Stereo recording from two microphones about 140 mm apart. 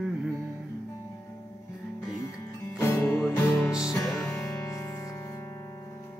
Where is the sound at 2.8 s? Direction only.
15° left (ahead or behind).